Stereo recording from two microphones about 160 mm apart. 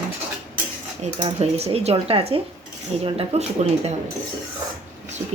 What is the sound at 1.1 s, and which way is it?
Speech, 40° right (ahead or behind).